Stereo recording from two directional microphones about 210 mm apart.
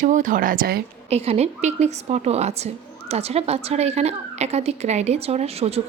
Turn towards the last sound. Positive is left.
turn(degrees=-30)  # may be behind; listen again after turning